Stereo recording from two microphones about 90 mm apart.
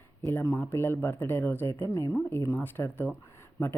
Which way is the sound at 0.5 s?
20° left (ahead or behind).